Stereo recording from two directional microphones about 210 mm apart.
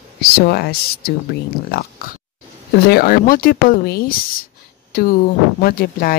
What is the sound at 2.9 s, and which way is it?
Speech, 45° left (ahead or behind).